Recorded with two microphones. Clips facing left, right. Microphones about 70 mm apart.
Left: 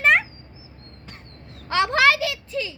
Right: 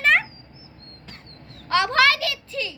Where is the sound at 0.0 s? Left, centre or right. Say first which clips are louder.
Left 1 dB; centre.